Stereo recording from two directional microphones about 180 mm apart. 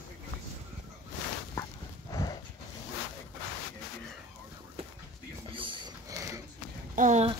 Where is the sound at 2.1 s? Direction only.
20° left (ahead or behind).